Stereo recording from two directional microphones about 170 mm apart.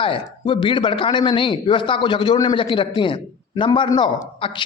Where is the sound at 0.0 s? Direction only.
30° left (ahead or behind).